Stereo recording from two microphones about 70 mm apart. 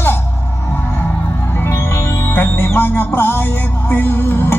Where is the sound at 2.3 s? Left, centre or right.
Left.